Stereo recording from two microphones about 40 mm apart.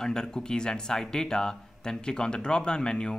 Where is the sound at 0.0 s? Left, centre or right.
Centre.